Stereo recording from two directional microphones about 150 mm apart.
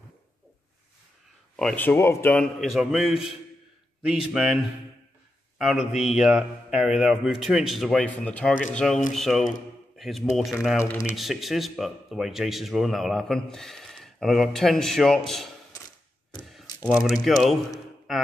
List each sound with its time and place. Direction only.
1.6 s speech: 10° left (ahead or behind)
2.6 s speech: 5° right (ahead or behind)
5.6 s speech: centre (ahead or behind)
10.8 s speech: 20° left (ahead or behind)
11.1 s speech: centre (ahead or behind)
16.3 s a sound: centre (ahead or behind)
16.9 s speech: centre (ahead or behind)